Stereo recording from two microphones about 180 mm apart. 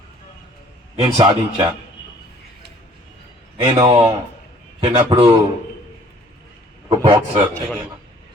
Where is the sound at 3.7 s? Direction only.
25° right (ahead or behind).